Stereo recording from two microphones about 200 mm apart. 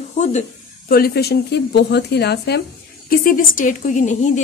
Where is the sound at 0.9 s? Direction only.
50° left (ahead or behind).